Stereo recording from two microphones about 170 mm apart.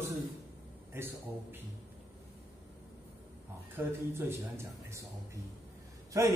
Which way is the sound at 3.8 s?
15° right (ahead or behind).